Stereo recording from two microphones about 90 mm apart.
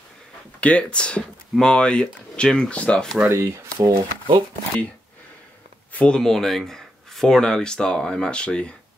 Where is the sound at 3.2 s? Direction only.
35° right (ahead or behind).